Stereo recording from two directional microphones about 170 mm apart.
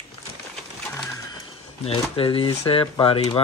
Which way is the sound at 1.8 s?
35° left (ahead or behind).